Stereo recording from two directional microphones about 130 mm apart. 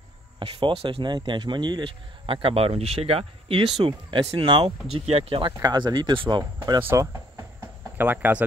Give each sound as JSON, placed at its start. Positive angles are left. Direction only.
{"t": 0.4, "sound": "speech", "side_deg": -40}
{"t": 5.0, "sound": "speech", "side_deg": -55}
{"t": 5.4, "sound": "speech", "side_deg": -35}
{"t": 6.8, "sound": "speech", "side_deg": -20}